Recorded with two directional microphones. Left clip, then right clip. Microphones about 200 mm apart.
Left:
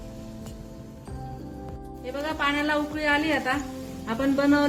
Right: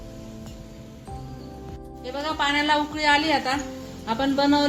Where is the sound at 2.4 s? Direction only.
45° right (ahead or behind).